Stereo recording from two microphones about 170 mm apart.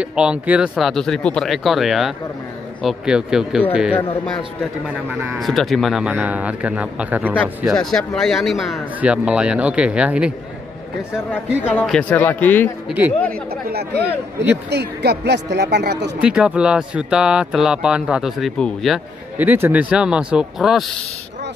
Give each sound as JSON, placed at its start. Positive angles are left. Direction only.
{"t": 0.0, "sound": "speech", "side_deg": -5}
{"t": 5.4, "sound": "speech", "side_deg": 0}
{"t": 7.7, "sound": "speech", "side_deg": 5}
{"t": 11.7, "sound": "a man's voice", "side_deg": 5}
{"t": 12.8, "sound": "speech", "side_deg": -10}
{"t": 13.3, "sound": "speech", "side_deg": -65}
{"t": 16.2, "sound": "speech", "side_deg": -5}
{"t": 19.3, "sound": "speech", "side_deg": -10}